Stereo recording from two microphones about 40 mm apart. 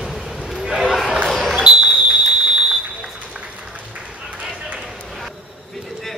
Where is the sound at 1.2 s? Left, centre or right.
Centre.